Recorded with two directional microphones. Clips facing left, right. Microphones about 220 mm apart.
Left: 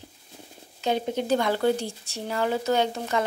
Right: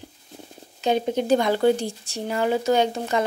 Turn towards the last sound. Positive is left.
turn(degrees=-15)  # may be behind; listen again after turning